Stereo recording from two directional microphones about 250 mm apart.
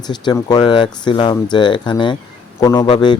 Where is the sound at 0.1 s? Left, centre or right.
Centre.